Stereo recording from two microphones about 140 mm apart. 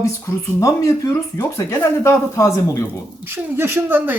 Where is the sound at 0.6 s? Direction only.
25° left (ahead or behind).